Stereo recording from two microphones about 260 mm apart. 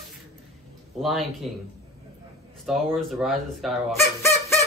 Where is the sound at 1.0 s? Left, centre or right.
Centre.